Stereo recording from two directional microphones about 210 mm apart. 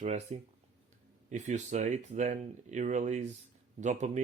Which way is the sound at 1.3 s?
35° right (ahead or behind).